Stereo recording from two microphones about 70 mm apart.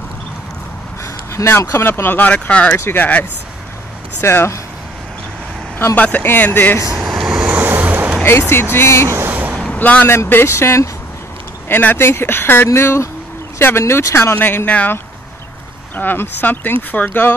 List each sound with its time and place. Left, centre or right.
1.3 s speech: left; by 2.7 s centre
2.8 s speech: left
4.2 s speech: left
5.9 s speech: left
7.0 s vehicle: centre
7.2 s vehicle: centre
8.2 s speech: left
9.3 s vehicle: right
9.8 s speech: left
10.0 s speech: left
11.7 s speech: left
16.0 s speech: left